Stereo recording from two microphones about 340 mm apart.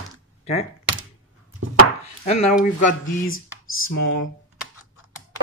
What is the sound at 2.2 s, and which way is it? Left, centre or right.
Speech, left.